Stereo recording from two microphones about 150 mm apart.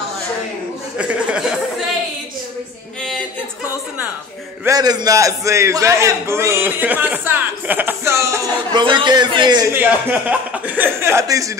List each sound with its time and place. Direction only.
0.9 s speech: 5° right (ahead or behind)
4.6 s a man's voice: 25° right (ahead or behind)
8.7 s a man's voice: 30° right (ahead or behind)
9.7 s speech: 15° right (ahead or behind)